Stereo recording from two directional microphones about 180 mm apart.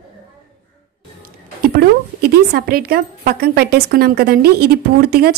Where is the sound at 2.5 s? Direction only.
55° right (ahead or behind).